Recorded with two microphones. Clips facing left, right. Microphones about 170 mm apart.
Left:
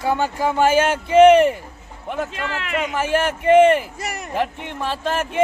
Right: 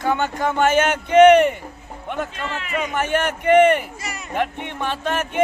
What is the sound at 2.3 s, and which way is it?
Speech, 90° left.